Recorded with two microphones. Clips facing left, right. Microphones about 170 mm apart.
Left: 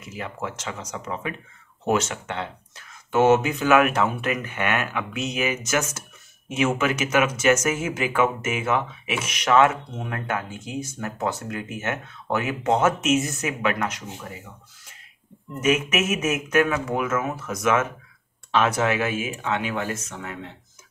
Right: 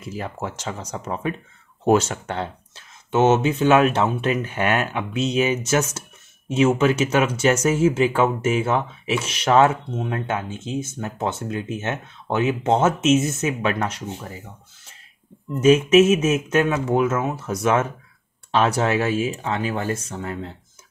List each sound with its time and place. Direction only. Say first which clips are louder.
0.0 s speech: right 3 dB; 35° right (ahead or behind)
2.8 s speech: right 1 dB; 25° right (ahead or behind)
15.6 s speech: right 9 dB; 30° right (ahead or behind)